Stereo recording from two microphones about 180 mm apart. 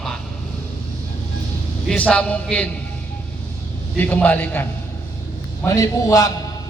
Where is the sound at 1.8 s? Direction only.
5° left (ahead or behind).